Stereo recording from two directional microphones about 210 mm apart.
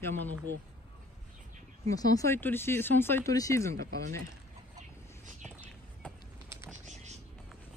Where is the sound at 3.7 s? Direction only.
45° right (ahead or behind).